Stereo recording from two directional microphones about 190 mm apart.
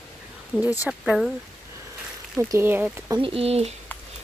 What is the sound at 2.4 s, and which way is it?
Speech, 15° right (ahead or behind).